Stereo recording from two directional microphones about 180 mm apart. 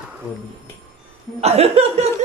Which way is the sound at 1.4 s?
35° right (ahead or behind).